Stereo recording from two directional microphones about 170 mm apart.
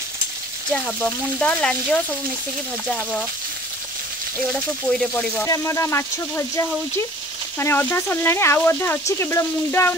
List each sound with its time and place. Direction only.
0.7 s speech: 5° left (ahead or behind)
4.5 s speech: 5° left (ahead or behind)